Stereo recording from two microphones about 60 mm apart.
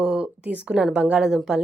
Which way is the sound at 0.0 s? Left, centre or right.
Centre.